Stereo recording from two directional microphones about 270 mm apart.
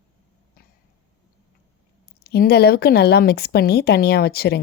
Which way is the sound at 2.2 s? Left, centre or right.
Left.